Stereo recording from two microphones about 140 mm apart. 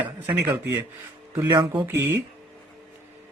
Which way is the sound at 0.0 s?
10° right (ahead or behind).